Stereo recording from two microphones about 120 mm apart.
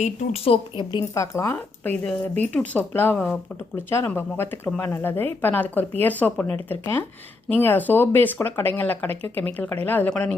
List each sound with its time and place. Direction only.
0.4 s a woman's voice: 45° left (ahead or behind)
1.1 s speech: 25° left (ahead or behind)